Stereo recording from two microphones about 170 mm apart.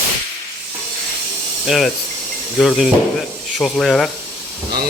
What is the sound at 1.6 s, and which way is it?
Speech, centre (ahead or behind).